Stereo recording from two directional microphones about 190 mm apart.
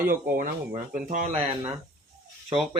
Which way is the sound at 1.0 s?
40° right (ahead or behind).